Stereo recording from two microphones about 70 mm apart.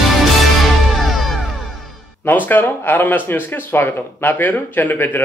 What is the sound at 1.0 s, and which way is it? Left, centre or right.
Music, centre.